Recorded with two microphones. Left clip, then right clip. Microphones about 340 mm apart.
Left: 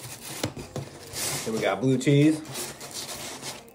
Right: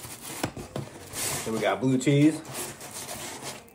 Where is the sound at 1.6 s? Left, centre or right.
Centre.